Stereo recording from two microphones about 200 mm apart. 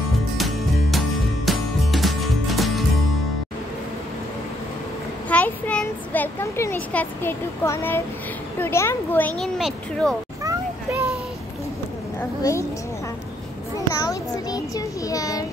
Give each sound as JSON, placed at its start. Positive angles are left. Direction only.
{"t": 0.4, "sound": "music", "side_deg": 0}
{"t": 5.3, "sound": "a sound", "side_deg": 5}
{"t": 8.5, "sound": "a child's voice", "side_deg": 10}
{"t": 10.4, "sound": "vehicle", "side_deg": -15}
{"t": 12.2, "sound": "a woman's voice", "side_deg": 15}
{"t": 13.8, "sound": "a child's voice", "side_deg": 20}